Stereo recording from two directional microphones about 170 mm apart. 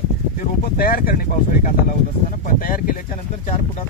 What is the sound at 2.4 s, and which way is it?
Speech, 55° left (ahead or behind).